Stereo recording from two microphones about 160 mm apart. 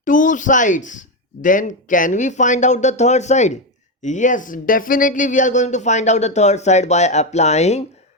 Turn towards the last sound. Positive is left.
turn(degrees=45)  # may be behind; listen again after turning